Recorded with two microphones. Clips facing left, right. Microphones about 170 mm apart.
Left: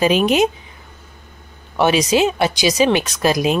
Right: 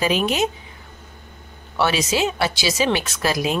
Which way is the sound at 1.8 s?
15° left (ahead or behind).